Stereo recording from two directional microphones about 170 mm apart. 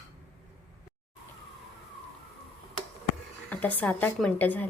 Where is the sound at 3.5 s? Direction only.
10° left (ahead or behind).